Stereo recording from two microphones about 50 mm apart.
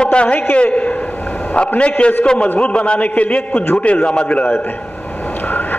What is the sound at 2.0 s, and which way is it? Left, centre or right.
A man's voice, left.